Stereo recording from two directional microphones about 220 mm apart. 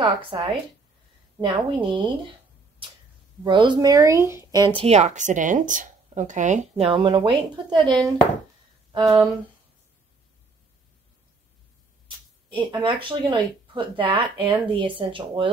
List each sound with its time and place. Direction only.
0.3 s speech: 20° right (ahead or behind)
3.4 s speech: 20° right (ahead or behind)
12.5 s speech: 20° right (ahead or behind)